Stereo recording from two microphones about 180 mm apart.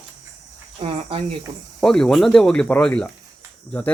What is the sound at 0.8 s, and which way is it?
Cricket, 30° right (ahead or behind).